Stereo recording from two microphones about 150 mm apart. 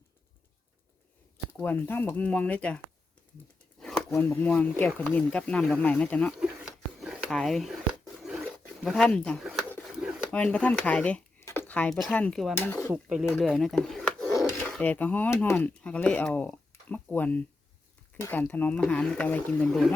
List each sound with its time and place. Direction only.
1.5 s speech: 10° left (ahead or behind)
3.8 s a sound: 5° left (ahead or behind)
4.1 s speech: 10° left (ahead or behind)
6.3 s a sound: 5° right (ahead or behind)
8.4 s speech: centre (ahead or behind)
12.5 s speech: 20° left (ahead or behind)
13.3 s speech: centre (ahead or behind)